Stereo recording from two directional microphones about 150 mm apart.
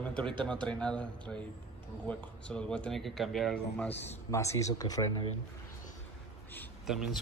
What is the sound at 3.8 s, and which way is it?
Speech, 15° left (ahead or behind).